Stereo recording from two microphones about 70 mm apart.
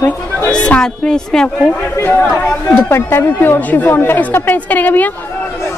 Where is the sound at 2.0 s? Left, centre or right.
Left.